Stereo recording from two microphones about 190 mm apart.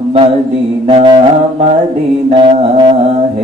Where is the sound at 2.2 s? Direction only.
25° right (ahead or behind).